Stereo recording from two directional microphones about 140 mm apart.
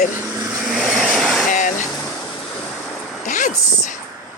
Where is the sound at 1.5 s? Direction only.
65° left (ahead or behind).